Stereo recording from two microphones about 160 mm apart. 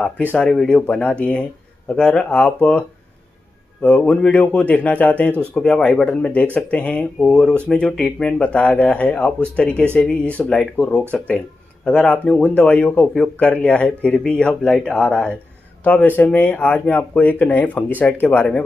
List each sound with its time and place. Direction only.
0.3 s speech: 5° left (ahead or behind)
3.8 s speech: 10° left (ahead or behind)